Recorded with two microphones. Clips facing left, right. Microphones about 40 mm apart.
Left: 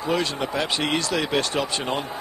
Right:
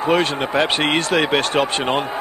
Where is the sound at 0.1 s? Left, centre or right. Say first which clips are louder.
Right 6 dB; right.